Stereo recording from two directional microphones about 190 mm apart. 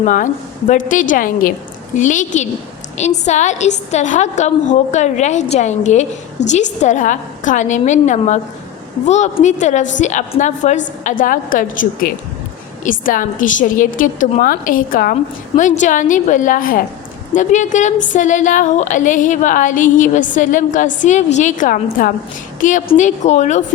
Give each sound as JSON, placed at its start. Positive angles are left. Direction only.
{"t": 0.0, "sound": "a woman's voice", "side_deg": 40}
{"t": 6.4, "sound": "a woman's voice", "side_deg": 65}
{"t": 6.8, "sound": "a woman's voice", "side_deg": 40}